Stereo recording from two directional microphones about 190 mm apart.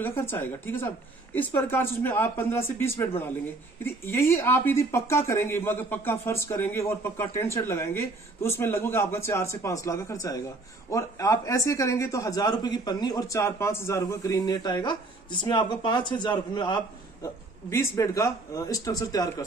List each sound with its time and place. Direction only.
0.0 s a man's voice: 10° left (ahead or behind)